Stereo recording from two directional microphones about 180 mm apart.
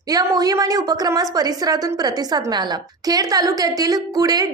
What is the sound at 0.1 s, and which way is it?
A woman's voice, 20° right (ahead or behind).